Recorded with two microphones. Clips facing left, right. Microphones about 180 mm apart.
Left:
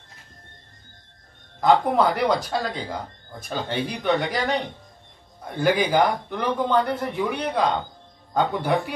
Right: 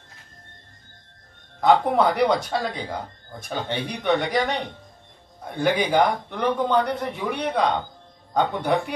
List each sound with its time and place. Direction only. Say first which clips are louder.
1.6 s speech: even; centre (ahead or behind)
5.6 s speech: even; centre (ahead or behind)